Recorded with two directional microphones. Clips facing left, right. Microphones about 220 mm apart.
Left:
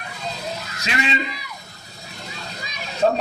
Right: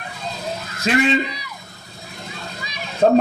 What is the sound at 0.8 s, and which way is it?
Speech, 50° right (ahead or behind).